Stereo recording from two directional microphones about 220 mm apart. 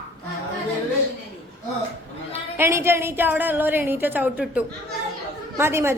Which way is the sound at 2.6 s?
10° right (ahead or behind).